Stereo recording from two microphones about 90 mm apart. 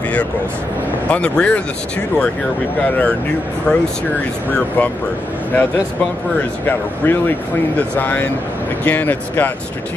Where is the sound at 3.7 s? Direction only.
10° left (ahead or behind).